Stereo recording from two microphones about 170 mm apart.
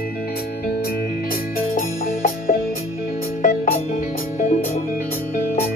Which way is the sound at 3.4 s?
55° left (ahead or behind).